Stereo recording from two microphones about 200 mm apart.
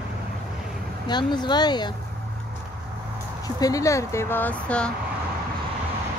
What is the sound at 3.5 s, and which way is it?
Speech, 15° left (ahead or behind).